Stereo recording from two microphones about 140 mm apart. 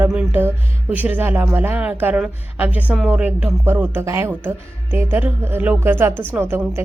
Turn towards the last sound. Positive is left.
turn(degrees=-15)  # may be behind; listen again after turning